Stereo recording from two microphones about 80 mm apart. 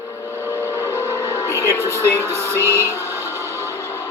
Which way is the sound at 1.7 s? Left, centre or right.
Left.